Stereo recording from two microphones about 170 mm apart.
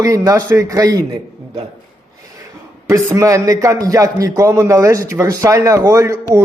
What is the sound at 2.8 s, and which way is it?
A man's voice, 15° right (ahead or behind).